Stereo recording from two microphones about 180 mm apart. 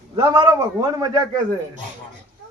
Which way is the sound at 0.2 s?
20° right (ahead or behind).